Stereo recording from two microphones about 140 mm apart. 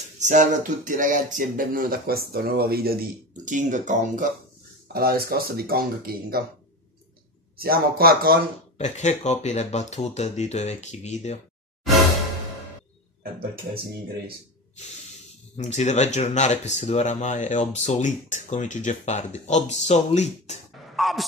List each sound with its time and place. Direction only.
0.2 s a sound: 60° right (ahead or behind)
4.9 s speech: 90° right
7.5 s speech: 90° right
8.7 s speech: 55° left (ahead or behind)
15.5 s speech: 55° left (ahead or behind)
20.9 s a sound: centre (ahead or behind)